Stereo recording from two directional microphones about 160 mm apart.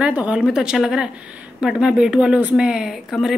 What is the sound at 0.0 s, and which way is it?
A woman's voice, 5° right (ahead or behind).